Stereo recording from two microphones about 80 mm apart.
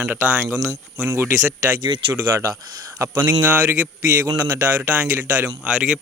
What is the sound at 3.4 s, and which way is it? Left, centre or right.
Speech, right.